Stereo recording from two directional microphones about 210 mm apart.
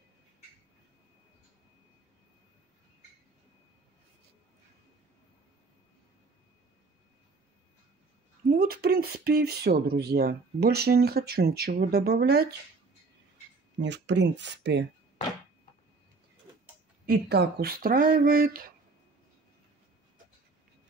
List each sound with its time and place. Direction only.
8.5 s speech: 45° right (ahead or behind)
13.7 s speech: 55° right (ahead or behind)
17.0 s speech: 50° right (ahead or behind)